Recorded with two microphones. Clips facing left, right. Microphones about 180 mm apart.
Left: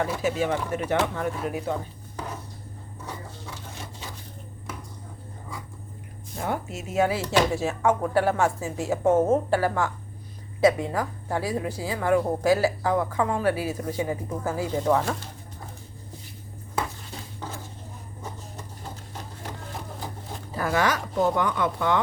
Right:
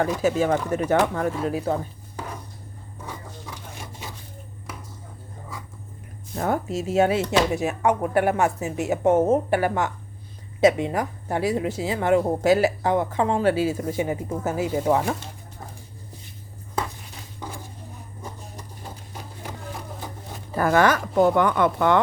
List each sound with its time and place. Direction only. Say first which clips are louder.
0.0 s speech: right 4 dB; 40° right (ahead or behind)
1.5 s speech: right 4 dB; 30° right (ahead or behind)
6.4 s a woman's voice: right 5 dB; 40° right (ahead or behind); by 15.1 s 15° right (ahead or behind)
20.6 s speech: right 6 dB; 50° right (ahead or behind)